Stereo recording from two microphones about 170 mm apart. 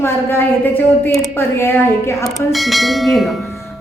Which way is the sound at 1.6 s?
15° left (ahead or behind).